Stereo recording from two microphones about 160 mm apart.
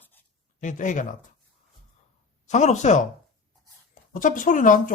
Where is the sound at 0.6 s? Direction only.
50° left (ahead or behind).